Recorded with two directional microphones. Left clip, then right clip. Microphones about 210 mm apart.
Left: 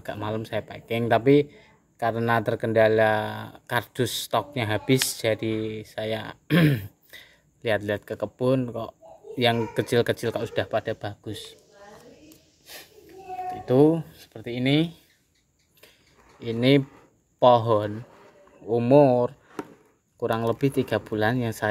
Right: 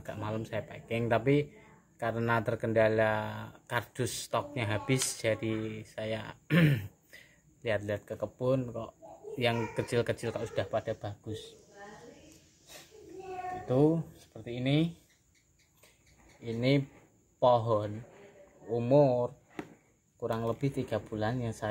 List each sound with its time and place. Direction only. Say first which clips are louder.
0.0 s speech: left 7 dB; 35° left (ahead or behind)
13.7 s speech: left 8 dB; 40° left (ahead or behind)
16.4 s speech: left 9 dB; 40° left (ahead or behind)